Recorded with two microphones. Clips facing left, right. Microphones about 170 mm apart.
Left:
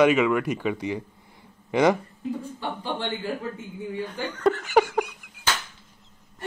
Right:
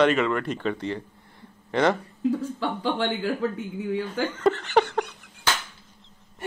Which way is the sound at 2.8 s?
75° right (ahead or behind).